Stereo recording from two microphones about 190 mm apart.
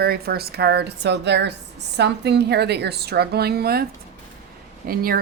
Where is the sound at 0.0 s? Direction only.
55° right (ahead or behind).